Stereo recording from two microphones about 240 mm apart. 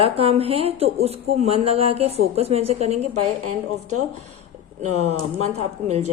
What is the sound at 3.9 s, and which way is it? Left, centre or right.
Speech, right.